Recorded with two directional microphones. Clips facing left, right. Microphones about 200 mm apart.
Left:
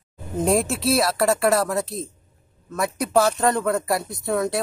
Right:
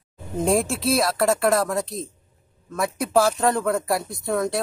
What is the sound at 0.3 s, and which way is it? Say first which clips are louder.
Speech: even; centre (ahead or behind).